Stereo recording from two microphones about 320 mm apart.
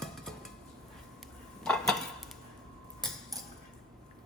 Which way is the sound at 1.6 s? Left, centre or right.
Centre.